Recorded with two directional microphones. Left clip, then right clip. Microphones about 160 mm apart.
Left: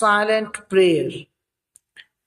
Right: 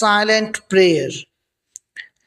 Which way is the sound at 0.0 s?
40° right (ahead or behind).